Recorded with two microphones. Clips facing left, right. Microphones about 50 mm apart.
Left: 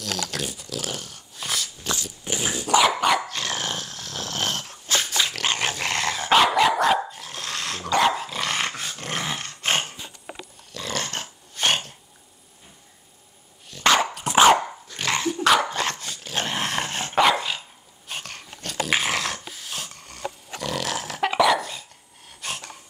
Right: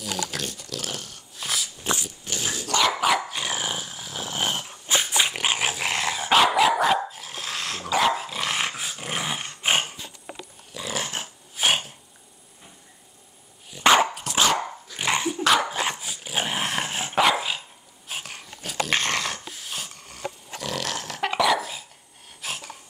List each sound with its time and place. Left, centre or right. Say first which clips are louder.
0.0 s dog: even; centre
0.4 s dog: left 2 dB; centre
1.8 s dog: right 2 dB; right
2.2 s dog: left 4 dB; left
2.8 s dog: even; centre
3.3 s dog: even; centre
13.7 s dog: right 2 dB; centre
14.2 s dog: left 7 dB; left
15.0 s dog: even; centre
15.3 s dog: left 4 dB; centre
22.4 s a sound: left 1 dB; centre